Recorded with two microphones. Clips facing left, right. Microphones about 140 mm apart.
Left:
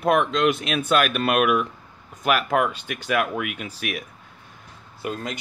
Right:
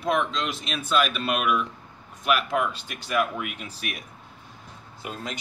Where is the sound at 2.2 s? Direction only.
50° left (ahead or behind).